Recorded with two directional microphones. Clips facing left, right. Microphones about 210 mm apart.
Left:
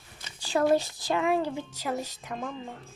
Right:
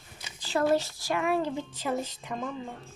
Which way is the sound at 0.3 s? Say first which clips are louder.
Left 2 dB; 15° left (ahead or behind).